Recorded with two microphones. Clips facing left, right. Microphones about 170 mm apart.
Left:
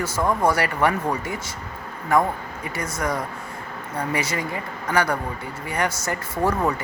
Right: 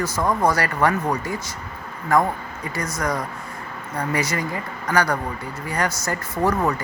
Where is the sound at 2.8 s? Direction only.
25° left (ahead or behind).